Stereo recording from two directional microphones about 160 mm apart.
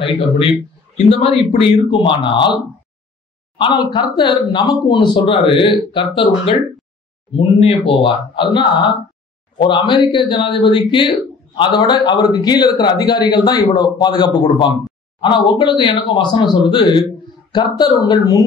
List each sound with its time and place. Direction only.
0.9 s speech: 40° left (ahead or behind)
3.5 s a man's voice: 25° left (ahead or behind)